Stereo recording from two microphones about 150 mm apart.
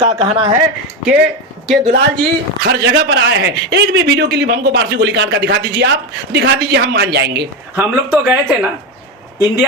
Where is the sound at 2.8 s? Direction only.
90° right.